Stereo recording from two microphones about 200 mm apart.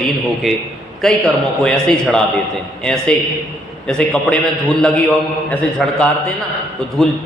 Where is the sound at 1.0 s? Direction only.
5° left (ahead or behind).